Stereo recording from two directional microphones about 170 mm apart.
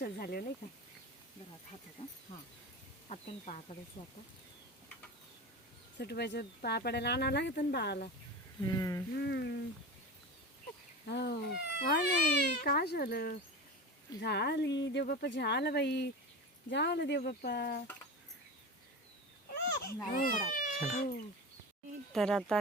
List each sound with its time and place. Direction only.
0.0 s speech: 60° left (ahead or behind)
2.0 s speech: 35° left (ahead or behind)
3.1 s speech: 45° left (ahead or behind)
6.0 s speech: 75° left (ahead or behind)
8.6 s humming: 20° left (ahead or behind)
9.1 s speech: 80° left
11.1 s speech: 80° left; by 13.3 s 65° left (ahead or behind)
14.2 s speech: 80° left
15.0 s speech: 70° left (ahead or behind)
19.5 s a sound: 65° left (ahead or behind)
20.1 s speech: 55° left (ahead or behind)
22.1 s speech: centre (ahead or behind)